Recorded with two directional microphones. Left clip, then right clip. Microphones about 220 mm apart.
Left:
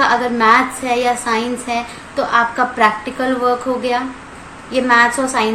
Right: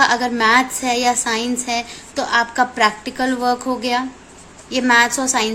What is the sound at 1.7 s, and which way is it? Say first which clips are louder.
A woman's voice: left 2 dB; 45° right (ahead or behind).